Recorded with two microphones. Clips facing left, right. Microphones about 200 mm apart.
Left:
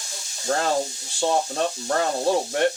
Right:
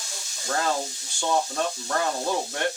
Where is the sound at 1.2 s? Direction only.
30° left (ahead or behind).